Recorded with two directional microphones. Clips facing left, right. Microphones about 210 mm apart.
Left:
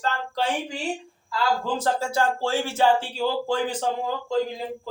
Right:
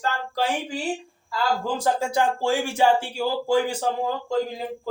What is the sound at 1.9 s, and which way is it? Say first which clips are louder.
Speech: right 1 dB; 15° right (ahead or behind).